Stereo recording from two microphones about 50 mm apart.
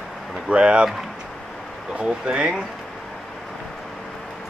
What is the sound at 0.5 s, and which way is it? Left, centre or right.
Speech, right.